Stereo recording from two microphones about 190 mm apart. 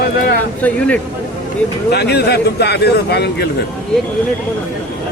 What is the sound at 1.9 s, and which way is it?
A man's voice, 60° left (ahead or behind).